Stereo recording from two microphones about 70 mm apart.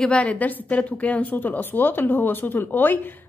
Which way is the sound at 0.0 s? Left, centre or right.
Centre.